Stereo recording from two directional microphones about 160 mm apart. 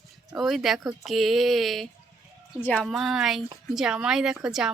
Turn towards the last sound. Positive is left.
turn(degrees=-5)  # may be behind; listen again after turning